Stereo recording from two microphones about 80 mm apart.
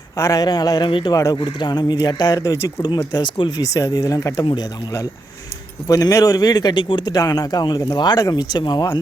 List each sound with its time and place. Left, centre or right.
0.2 s a man's voice: left
0.9 s a man's voice: left
1.1 s a man's voice: left
1.4 s speech: left
2.4 s a man's voice: left
3.2 s speech: left
3.6 s a man's voice: left
5.9 s a man's voice: left
7.1 s speech: left